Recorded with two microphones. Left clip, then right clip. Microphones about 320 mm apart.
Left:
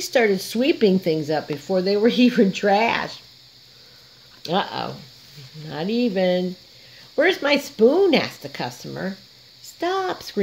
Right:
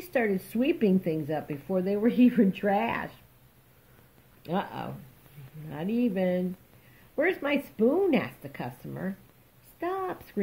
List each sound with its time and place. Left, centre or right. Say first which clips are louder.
0.0 s speech: left 9 dB; left
4.4 s speech: left 9 dB; left